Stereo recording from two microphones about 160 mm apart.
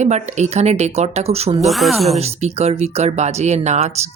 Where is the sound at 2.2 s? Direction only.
40° right (ahead or behind).